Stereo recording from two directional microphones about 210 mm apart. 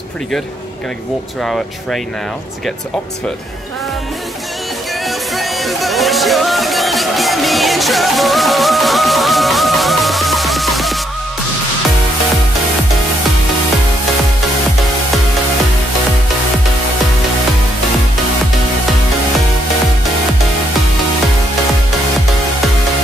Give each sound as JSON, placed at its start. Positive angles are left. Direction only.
{"t": 1.4, "sound": "speech", "side_deg": 0}
{"t": 5.0, "sound": "music", "side_deg": 0}